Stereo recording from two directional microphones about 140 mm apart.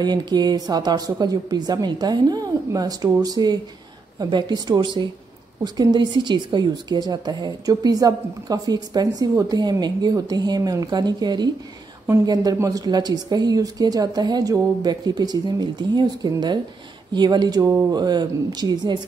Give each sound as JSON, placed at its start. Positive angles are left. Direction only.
{"t": 0.0, "sound": "a woman's voice", "side_deg": -30}